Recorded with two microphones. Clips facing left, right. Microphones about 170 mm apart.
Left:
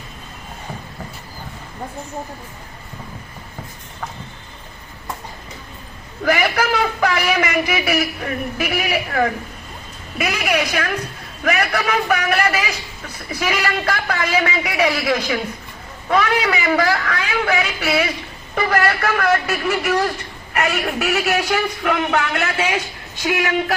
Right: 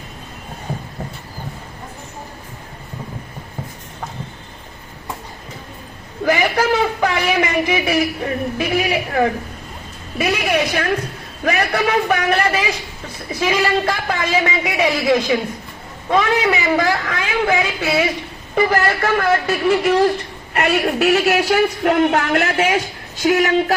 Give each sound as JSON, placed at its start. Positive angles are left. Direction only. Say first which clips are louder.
{"t": 6.2, "sound": "a man's voice", "louder": "right 2 dB", "side_deg": -20}